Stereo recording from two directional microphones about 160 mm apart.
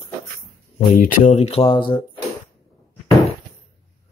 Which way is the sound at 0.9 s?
55° left (ahead or behind).